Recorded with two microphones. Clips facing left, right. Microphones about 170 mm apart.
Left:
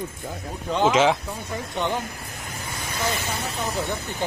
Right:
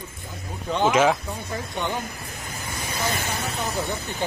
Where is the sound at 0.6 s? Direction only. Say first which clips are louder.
Even; 5° left (ahead or behind).